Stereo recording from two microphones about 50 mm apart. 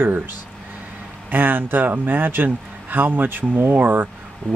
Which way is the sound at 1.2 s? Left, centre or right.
Right.